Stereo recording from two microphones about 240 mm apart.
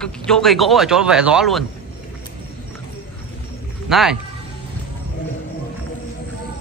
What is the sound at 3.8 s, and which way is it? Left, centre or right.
Speech, centre.